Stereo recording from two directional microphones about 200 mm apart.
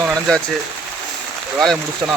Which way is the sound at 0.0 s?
5° left (ahead or behind).